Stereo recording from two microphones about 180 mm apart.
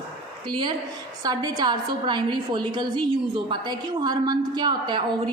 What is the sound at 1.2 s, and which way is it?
A woman's voice, 20° right (ahead or behind).